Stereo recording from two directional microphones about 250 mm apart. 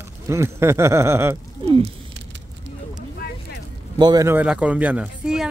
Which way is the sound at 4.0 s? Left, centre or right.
Centre.